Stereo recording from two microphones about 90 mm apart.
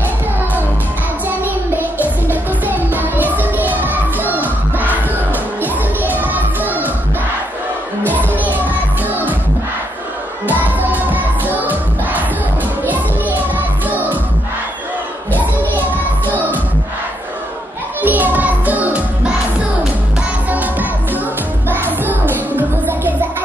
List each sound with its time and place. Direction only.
1.4 s music: 20° right (ahead or behind)
8.0 s music: 20° left (ahead or behind)
8.6 s music: 20° right (ahead or behind)
10.4 s music: 20° right (ahead or behind)
15.3 s children playing: 20° right (ahead or behind)
18.0 s music: 20° right (ahead or behind)
20.4 s music: 20° right (ahead or behind)